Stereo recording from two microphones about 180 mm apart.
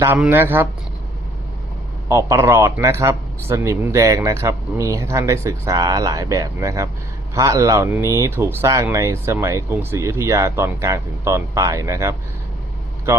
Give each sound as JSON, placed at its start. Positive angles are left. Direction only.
{"t": 0.0, "sound": "speech", "side_deg": -10}
{"t": 2.0, "sound": "speech", "side_deg": -15}